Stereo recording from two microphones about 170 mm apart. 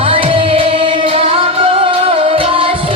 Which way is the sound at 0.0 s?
30° right (ahead or behind).